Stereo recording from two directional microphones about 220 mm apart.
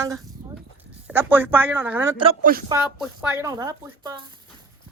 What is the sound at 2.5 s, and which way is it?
Speech, 40° right (ahead or behind).